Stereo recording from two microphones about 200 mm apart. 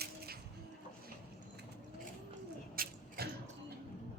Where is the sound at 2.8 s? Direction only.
50° right (ahead or behind).